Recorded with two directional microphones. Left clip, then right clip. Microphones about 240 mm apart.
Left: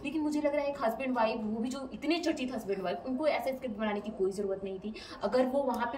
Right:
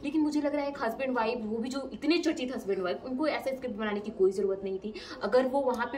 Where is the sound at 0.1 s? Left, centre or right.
Centre.